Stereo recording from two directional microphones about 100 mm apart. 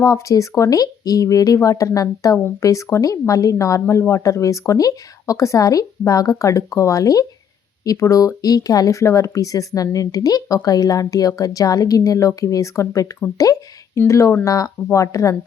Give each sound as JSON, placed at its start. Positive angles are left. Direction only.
{"t": 0.0, "sound": "speech", "side_deg": 35}